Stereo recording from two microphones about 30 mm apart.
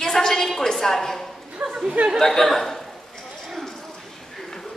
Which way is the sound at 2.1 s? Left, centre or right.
Centre.